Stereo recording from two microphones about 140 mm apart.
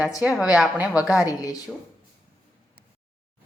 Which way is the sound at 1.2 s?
25° left (ahead or behind).